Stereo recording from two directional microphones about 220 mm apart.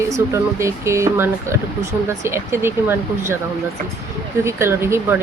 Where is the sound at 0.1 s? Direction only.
15° right (ahead or behind).